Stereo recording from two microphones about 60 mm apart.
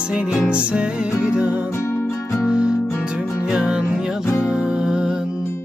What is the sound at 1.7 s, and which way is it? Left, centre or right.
Music, left.